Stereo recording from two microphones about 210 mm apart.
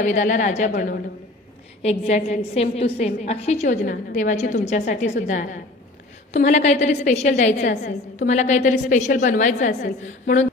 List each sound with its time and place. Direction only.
0.0 s a woman's voice: 35° left (ahead or behind)
1.8 s a woman's voice: 30° left (ahead or behind)
7.7 s a woman's voice: 50° left (ahead or behind)
8.3 s a woman's voice: 35° left (ahead or behind)